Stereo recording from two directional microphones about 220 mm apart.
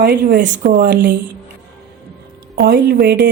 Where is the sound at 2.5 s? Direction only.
45° right (ahead or behind).